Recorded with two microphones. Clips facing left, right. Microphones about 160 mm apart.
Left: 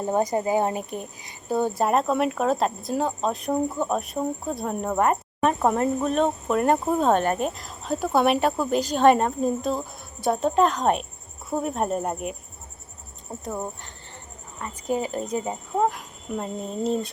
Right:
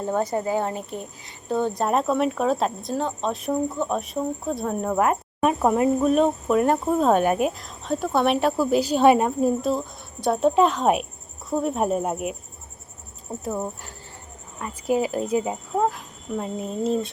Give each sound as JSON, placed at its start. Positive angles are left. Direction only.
{"t": 0.0, "sound": "speech", "side_deg": 15}
{"t": 13.4, "sound": "speech", "side_deg": -5}